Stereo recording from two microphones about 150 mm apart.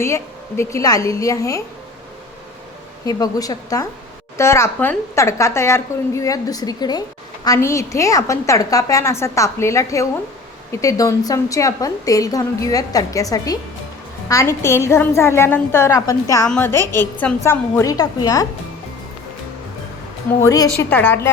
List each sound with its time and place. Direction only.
0.0 s a woman's voice: 15° left (ahead or behind)
3.1 s a woman's voice: 25° left (ahead or behind)
20.4 s a woman's voice: 25° left (ahead or behind)
20.7 s a woman's voice: 10° left (ahead or behind)